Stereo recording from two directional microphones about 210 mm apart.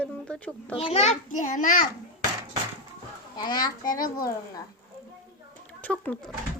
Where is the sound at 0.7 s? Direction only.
30° left (ahead or behind).